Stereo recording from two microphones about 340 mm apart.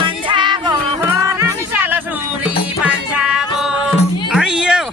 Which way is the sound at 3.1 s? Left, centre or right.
Centre.